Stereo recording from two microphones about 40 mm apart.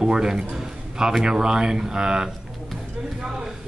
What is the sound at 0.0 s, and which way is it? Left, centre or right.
A man's voice, centre.